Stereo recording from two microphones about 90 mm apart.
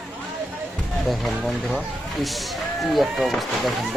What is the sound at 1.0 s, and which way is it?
Speech, centre (ahead or behind).